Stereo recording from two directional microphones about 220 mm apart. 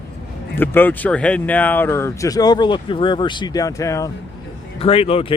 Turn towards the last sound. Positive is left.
turn(degrees=25)  # may be behind; listen again after turning